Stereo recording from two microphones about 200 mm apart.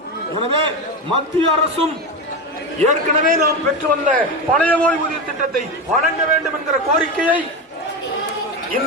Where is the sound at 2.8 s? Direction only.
45° right (ahead or behind).